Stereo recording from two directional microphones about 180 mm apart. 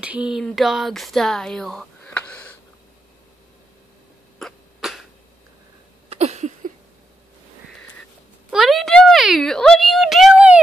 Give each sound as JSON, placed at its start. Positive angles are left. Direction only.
{"t": 0.0, "sound": "speech", "side_deg": -5}
{"t": 4.4, "sound": "cough", "side_deg": 0}
{"t": 6.0, "sound": "a sound", "side_deg": -40}
{"t": 8.5, "sound": "a woman's voice", "side_deg": 0}